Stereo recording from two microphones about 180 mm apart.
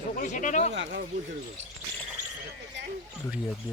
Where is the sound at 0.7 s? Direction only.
90° right.